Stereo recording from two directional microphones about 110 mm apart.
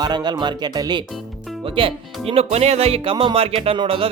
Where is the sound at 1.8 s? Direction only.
55° right (ahead or behind).